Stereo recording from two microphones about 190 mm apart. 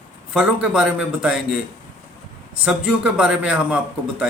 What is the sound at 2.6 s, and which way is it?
A man's voice, 5° right (ahead or behind).